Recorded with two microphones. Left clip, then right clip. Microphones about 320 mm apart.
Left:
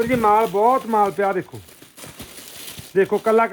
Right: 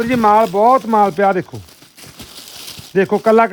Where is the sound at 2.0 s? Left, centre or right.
Centre.